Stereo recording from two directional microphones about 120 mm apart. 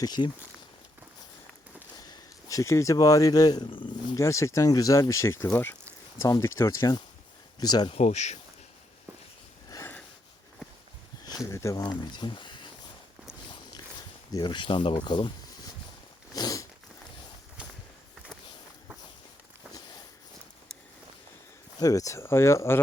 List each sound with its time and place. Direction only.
0.0 s speech: 35° left (ahead or behind)
2.0 s speech: 30° left (ahead or behind)
3.7 s speech: 45° left (ahead or behind)
4.1 s speech: 25° left (ahead or behind)
7.9 s speech: 65° left (ahead or behind)
9.6 s sniff: 25° left (ahead or behind)
11.4 s speech: 25° left (ahead or behind); by 12.7 s 40° left (ahead or behind)
14.3 s speech: 40° left (ahead or behind)
15.0 s a sound: 40° left (ahead or behind)
21.8 s speech: 30° left (ahead or behind)